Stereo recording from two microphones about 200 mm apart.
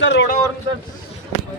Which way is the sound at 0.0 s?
65° left (ahead or behind).